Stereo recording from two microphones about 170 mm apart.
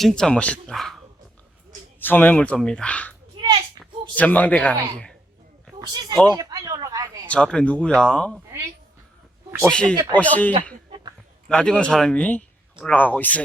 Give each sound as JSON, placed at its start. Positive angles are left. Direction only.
{"t": 0.0, "sound": "speech", "side_deg": 5}
{"t": 2.0, "sound": "speech", "side_deg": 10}
{"t": 5.8, "sound": "speech", "side_deg": -25}
{"t": 7.3, "sound": "speech", "side_deg": 5}
{"t": 9.6, "sound": "speech", "side_deg": 5}